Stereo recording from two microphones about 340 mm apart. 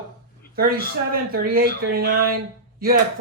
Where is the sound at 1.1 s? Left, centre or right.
Right.